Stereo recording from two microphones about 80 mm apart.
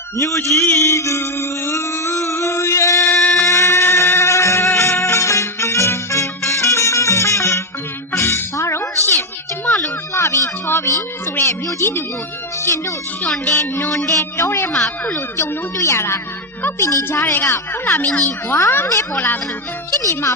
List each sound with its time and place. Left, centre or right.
0.2 s mantra: left
3.4 s music: left
9.6 s a sound: left
12.6 s a woman's voice: left
13.9 s a woman's voice: left
14.7 s speech: centre
15.4 s a woman's voice: left
17.8 s speech: centre
19.9 s speech: left